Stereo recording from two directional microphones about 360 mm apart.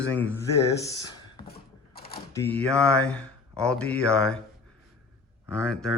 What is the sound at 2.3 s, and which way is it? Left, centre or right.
Speech, centre.